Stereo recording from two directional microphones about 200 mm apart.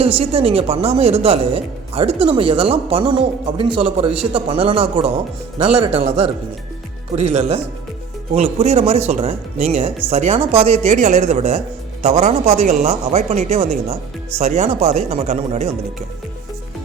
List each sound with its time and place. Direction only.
0.0 s speech: 30° right (ahead or behind)